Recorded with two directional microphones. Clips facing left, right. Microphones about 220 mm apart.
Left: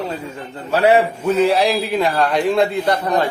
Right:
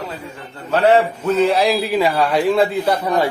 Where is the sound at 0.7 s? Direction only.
10° left (ahead or behind).